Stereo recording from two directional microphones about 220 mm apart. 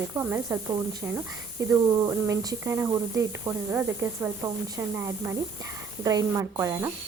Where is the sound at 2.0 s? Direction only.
10° right (ahead or behind).